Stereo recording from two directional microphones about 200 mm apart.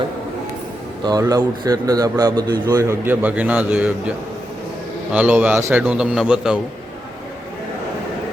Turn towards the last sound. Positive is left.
turn(degrees=-5)  # may be behind; listen again after turning